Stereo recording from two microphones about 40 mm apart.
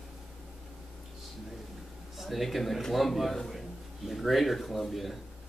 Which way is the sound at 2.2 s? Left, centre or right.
Centre.